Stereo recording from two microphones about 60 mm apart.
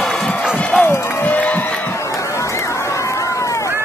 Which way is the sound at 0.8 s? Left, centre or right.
Left.